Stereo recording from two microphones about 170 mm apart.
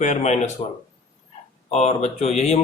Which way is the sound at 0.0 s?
45° left (ahead or behind).